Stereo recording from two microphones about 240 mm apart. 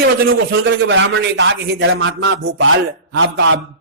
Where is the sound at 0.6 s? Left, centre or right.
Right.